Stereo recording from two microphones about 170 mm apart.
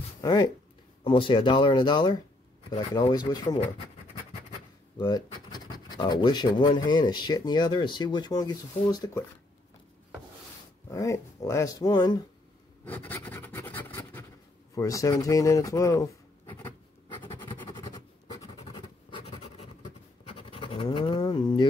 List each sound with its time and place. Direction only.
0.2 s speech: 25° left (ahead or behind)
4.9 s speech: 25° left (ahead or behind)
10.9 s speech: 20° left (ahead or behind)
12.8 s scratch: 10° left (ahead or behind)
14.8 s speech: 20° left (ahead or behind)
17.2 s scratch: 25° left (ahead or behind)
18.7 s writing: 30° left (ahead or behind)
20.2 s scratch: 30° left (ahead or behind)